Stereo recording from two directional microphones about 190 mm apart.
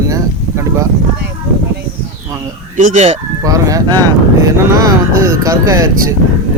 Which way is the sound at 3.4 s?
20° right (ahead or behind).